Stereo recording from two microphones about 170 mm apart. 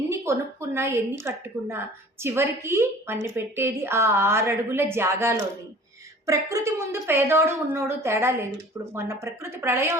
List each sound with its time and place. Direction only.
0.1 s a woman's voice: 15° right (ahead or behind)